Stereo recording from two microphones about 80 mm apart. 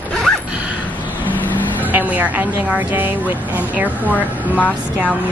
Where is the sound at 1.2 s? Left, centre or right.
Left.